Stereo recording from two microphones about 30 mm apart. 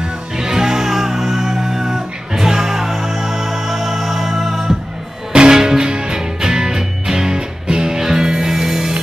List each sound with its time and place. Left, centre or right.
0.4 s music: centre
5.3 s music: right